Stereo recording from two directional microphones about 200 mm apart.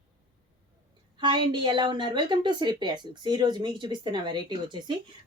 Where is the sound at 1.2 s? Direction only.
25° right (ahead or behind).